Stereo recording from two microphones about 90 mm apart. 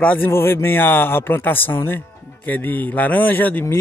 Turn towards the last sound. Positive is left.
turn(degrees=20)  # may be behind; listen again after turning